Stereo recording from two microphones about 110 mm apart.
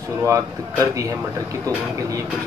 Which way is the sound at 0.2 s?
30° right (ahead or behind).